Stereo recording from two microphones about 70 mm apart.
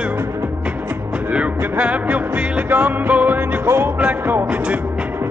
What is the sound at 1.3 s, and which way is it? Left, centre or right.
Music, centre.